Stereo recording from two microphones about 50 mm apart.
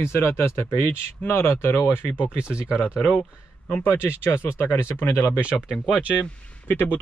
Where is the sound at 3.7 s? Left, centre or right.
Left.